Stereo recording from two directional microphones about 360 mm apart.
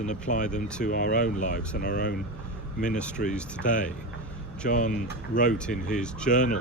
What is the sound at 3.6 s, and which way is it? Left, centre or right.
Speech, left.